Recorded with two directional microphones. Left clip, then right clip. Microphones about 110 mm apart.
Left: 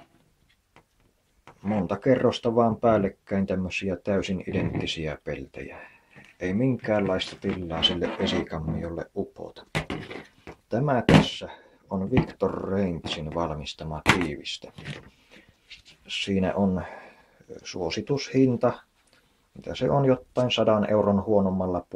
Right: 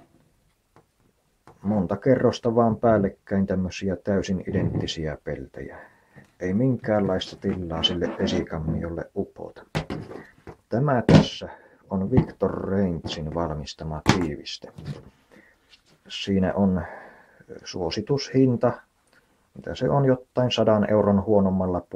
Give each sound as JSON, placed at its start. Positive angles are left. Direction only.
{"t": 1.6, "sound": "speech", "side_deg": -10}
{"t": 8.8, "sound": "a sound", "side_deg": -10}
{"t": 11.2, "sound": "speech", "side_deg": -10}
{"t": 16.1, "sound": "speech", "side_deg": -10}